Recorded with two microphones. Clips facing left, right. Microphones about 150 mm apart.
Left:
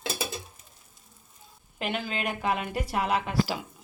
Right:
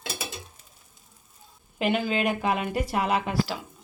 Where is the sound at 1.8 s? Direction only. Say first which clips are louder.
Right 6 dB; 5° right (ahead or behind).